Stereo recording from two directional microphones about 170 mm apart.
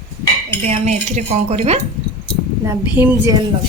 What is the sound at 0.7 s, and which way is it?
A woman's voice, 40° right (ahead or behind).